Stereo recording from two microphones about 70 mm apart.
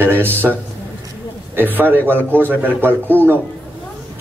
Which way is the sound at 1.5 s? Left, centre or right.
Right.